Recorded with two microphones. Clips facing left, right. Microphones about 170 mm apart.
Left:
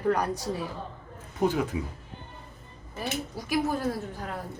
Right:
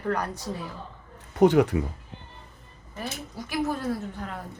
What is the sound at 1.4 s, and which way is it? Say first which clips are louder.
Speech: right 8 dB; 70° right (ahead or behind).